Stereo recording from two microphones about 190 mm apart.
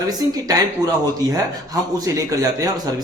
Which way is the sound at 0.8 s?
20° right (ahead or behind).